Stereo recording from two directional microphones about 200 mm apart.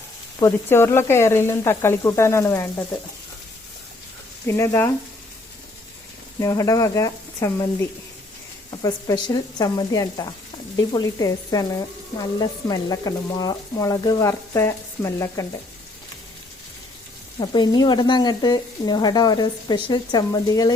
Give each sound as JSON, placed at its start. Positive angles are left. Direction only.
{"t": 0.3, "sound": "frying", "side_deg": 15}
{"t": 4.4, "sound": "frying", "side_deg": 15}
{"t": 6.4, "sound": "frying", "side_deg": 15}
{"t": 8.8, "sound": "speech", "side_deg": 20}
{"t": 10.9, "sound": "frying", "side_deg": 15}
{"t": 17.4, "sound": "speech", "side_deg": 20}